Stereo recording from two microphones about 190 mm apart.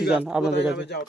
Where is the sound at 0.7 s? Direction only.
60° left (ahead or behind).